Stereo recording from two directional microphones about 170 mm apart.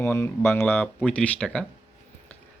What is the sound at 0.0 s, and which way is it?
Speech, 15° left (ahead or behind).